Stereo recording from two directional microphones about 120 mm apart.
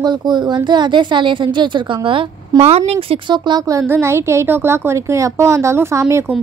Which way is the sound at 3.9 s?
20° right (ahead or behind).